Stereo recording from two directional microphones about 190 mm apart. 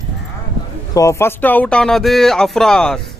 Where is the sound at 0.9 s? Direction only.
15° left (ahead or behind).